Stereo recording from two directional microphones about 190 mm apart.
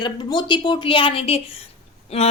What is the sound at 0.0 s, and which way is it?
A woman's voice, 25° left (ahead or behind).